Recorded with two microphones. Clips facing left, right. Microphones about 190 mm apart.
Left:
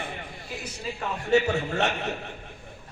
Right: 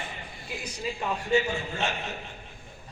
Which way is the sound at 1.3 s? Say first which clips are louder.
Left 5 dB; 70° left (ahead or behind).